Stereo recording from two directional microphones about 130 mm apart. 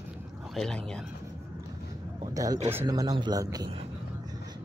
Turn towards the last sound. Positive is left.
turn(degrees=-30)  # may be behind; listen again after turning